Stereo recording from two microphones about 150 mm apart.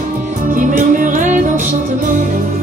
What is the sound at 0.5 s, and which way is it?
Music, 60° right (ahead or behind).